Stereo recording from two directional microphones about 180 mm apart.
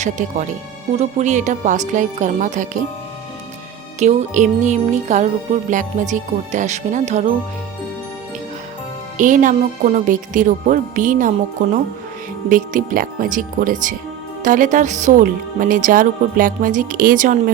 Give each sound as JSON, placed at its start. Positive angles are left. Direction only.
{"t": 0.0, "sound": "speech", "side_deg": -45}
{"t": 0.9, "sound": "music", "side_deg": -40}
{"t": 1.9, "sound": "speech", "side_deg": -45}
{"t": 4.0, "sound": "music", "side_deg": -40}
{"t": 5.7, "sound": "speech", "side_deg": -45}
{"t": 9.1, "sound": "speech", "side_deg": -45}
{"t": 12.5, "sound": "speech", "side_deg": -50}